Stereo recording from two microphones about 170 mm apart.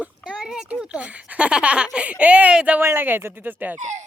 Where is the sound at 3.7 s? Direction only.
45° right (ahead or behind).